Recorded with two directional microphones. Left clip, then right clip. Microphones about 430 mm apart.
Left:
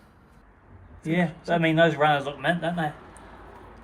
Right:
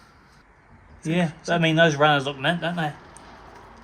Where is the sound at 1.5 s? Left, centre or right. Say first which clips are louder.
Right 2 dB; centre.